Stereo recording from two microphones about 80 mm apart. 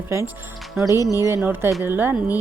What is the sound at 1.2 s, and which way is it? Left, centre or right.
Speech, right.